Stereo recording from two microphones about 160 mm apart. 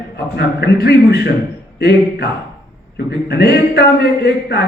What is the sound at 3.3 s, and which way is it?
A man's voice, 85° left.